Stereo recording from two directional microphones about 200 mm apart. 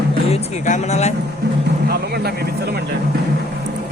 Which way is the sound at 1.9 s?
50° right (ahead or behind).